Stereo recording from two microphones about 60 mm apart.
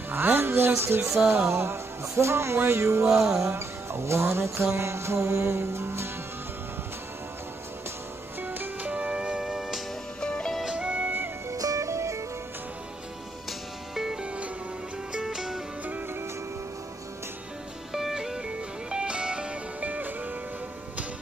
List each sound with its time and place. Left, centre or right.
0.1 s speech: right
1.5 s music: right
8.4 s music: right
9.4 s music: centre
10.2 s music: centre
10.6 s music: centre
11.5 s music: right
13.5 s music: centre
14.2 s music: centre
15.1 s music: centre
17.9 s music: centre; by 20.3 s right